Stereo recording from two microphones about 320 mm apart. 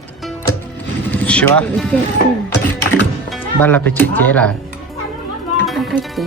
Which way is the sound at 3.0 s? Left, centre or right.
Centre.